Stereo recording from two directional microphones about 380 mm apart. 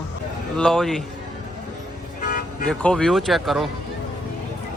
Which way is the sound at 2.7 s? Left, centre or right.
Centre.